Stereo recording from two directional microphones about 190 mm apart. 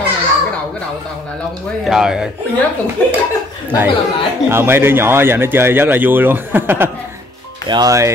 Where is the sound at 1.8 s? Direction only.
5° right (ahead or behind).